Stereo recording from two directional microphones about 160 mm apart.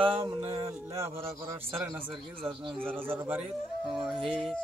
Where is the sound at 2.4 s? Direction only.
5° left (ahead or behind).